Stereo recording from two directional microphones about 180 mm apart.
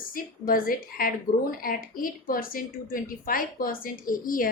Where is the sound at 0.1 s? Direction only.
50° left (ahead or behind).